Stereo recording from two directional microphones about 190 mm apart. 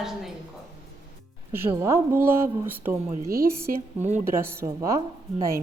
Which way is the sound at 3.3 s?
50° right (ahead or behind).